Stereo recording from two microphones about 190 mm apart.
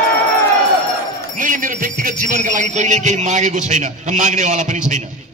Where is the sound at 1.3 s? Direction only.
45° right (ahead or behind).